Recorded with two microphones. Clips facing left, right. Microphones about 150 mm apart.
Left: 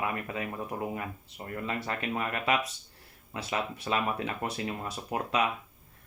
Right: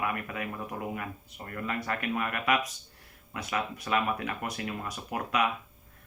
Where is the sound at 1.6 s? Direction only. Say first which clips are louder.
Right 2 dB; 25° left (ahead or behind).